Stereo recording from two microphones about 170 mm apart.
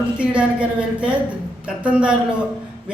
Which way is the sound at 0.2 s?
5° right (ahead or behind).